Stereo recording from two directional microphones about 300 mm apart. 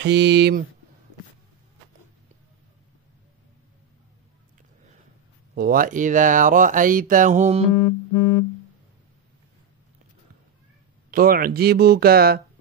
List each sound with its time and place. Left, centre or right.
0.0 s speech: right
5.5 s speech: right
7.7 s music: left
11.1 s speech: right